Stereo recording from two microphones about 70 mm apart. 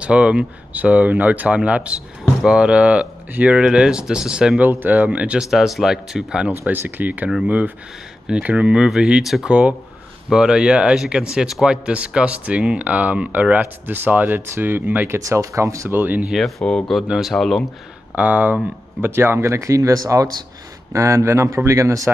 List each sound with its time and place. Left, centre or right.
0.0 s speech: centre
3.5 s speech: centre
4.6 s speech: right
5.4 s speech: centre
6.6 s speech: right; by 9.5 s centre
9.5 s speech: centre
15.0 s speech: right
15.9 s speech: right
16.3 s speech: centre
16.6 s speech: centre
18.1 s speech: right